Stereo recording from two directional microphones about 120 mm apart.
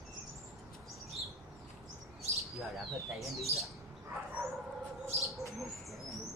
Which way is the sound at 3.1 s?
Centre (ahead or behind).